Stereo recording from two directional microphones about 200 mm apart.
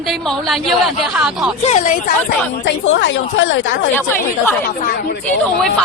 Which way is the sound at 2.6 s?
65° left (ahead or behind).